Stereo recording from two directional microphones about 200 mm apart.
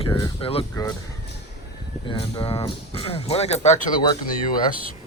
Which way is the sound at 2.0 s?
25° left (ahead or behind).